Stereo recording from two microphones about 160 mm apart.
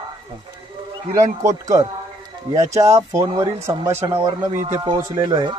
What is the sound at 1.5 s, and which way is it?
A man's voice, 20° right (ahead or behind).